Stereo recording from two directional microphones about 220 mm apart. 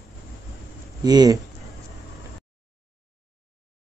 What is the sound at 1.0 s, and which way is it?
Speech, 20° right (ahead or behind).